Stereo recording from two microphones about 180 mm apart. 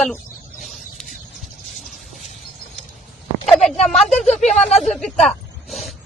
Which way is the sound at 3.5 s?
Centre (ahead or behind).